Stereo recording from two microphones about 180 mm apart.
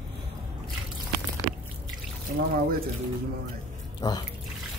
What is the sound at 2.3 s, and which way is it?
Speech, 55° right (ahead or behind).